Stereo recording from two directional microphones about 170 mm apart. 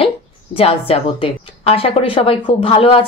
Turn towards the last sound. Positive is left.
turn(degrees=35)  # may be behind; listen again after turning